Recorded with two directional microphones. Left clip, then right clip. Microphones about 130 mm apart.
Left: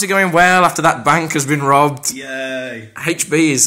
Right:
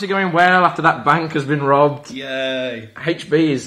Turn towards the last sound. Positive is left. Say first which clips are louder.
# left 2 dB
turn(degrees=35)  # may be behind; listen again after turning